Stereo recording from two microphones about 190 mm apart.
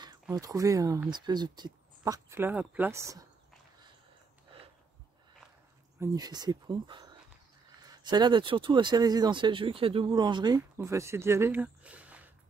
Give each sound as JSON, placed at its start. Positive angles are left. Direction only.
{"t": 0.0, "sound": "speech", "side_deg": -20}
{"t": 5.9, "sound": "speech", "side_deg": -20}